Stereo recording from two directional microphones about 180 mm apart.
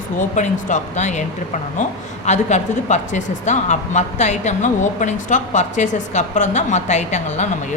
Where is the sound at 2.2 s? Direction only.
40° left (ahead or behind).